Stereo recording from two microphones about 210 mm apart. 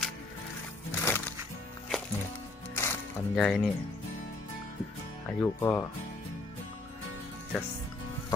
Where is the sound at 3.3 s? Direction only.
Centre (ahead or behind).